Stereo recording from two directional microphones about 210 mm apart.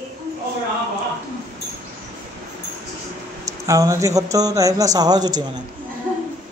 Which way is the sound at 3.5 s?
15° right (ahead or behind).